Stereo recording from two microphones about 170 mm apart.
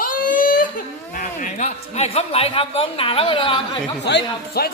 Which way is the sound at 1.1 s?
50° left (ahead or behind).